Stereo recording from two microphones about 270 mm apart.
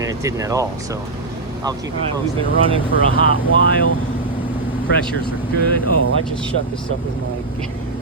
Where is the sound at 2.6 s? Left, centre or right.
Centre.